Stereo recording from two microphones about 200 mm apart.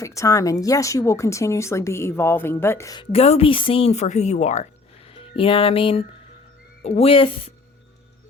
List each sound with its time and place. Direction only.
0.0 s speech: 15° left (ahead or behind)